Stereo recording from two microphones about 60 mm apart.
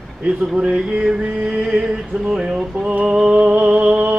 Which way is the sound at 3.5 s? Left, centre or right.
Right.